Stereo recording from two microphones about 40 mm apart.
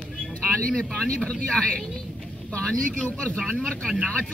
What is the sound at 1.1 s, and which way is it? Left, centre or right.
Speech, left.